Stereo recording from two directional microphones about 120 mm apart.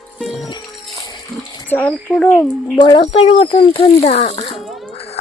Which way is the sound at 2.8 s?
40° left (ahead or behind).